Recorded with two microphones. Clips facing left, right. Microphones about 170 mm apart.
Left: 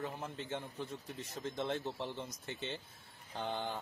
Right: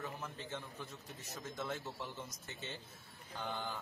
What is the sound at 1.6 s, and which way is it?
Speech, 25° left (ahead or behind).